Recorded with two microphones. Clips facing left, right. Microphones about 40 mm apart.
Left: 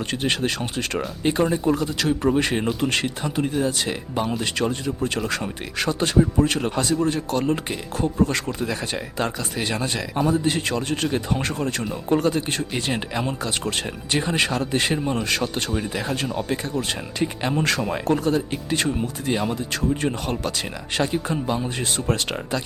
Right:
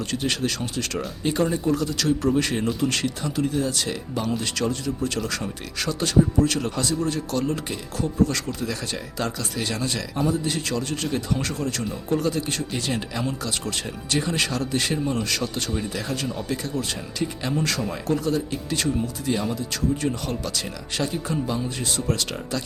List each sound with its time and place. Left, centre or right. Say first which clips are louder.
0.1 s speech: left 3 dB; left